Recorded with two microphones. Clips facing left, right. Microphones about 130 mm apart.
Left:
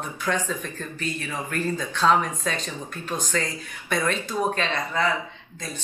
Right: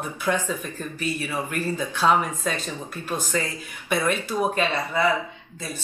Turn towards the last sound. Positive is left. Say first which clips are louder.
# right 2 dB
turn(degrees=-10)  # may be behind; listen again after turning